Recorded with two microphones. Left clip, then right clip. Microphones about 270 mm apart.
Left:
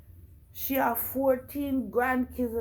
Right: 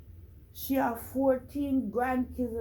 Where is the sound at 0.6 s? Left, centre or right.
Centre.